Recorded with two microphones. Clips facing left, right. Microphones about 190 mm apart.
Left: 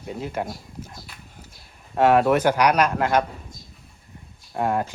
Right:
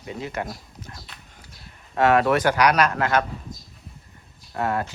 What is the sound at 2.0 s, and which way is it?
Speech, 10° left (ahead or behind).